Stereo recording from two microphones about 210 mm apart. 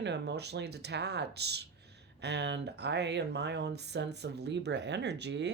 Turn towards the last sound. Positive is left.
turn(degrees=-55)  # may be behind; listen again after turning